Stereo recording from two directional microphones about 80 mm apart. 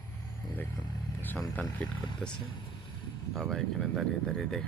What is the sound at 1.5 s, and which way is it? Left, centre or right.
Speech, left.